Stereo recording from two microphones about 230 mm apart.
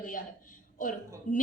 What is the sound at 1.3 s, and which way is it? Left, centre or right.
Speech, left.